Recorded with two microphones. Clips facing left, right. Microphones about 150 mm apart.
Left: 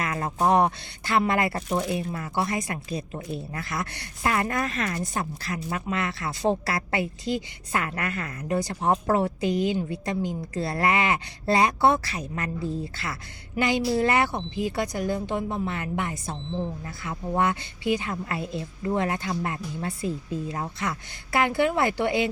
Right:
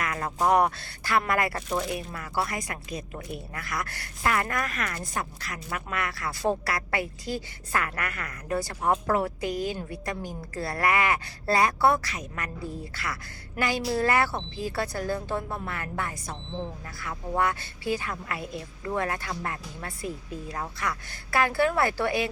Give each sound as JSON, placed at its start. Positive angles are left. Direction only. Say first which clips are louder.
{"t": 0.0, "sound": "speech", "louder": "left 2 dB", "side_deg": 25}